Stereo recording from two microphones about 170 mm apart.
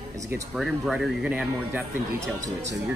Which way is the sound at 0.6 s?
Centre (ahead or behind).